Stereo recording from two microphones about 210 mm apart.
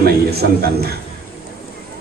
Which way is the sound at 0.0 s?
50° right (ahead or behind).